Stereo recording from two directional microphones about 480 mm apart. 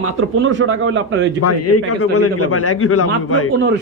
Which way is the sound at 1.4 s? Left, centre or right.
Left.